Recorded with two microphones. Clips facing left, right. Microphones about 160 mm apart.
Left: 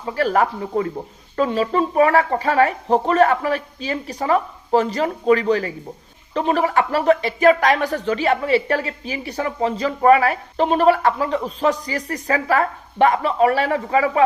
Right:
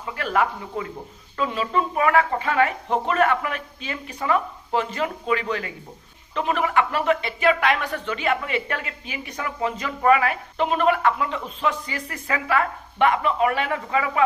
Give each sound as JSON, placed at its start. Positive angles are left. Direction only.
{"t": 0.0, "sound": "speech", "side_deg": 35}